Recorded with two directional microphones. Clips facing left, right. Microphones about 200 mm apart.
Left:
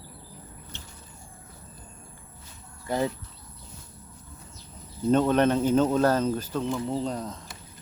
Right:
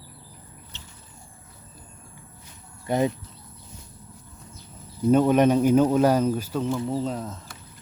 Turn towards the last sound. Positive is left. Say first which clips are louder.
# right 2 dB
turn(degrees=-5)  # may be behind; listen again after turning